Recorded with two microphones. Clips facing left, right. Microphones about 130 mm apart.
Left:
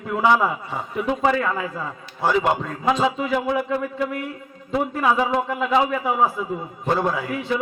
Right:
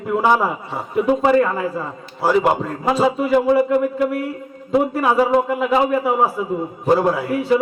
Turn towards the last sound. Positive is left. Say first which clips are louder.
# right 6 dB
turn(degrees=-5)  # may be behind; listen again after turning